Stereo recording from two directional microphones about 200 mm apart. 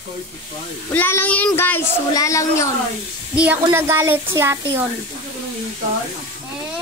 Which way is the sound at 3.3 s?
5° right (ahead or behind).